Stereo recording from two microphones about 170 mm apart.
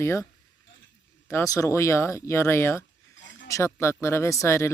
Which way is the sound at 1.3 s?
15° left (ahead or behind).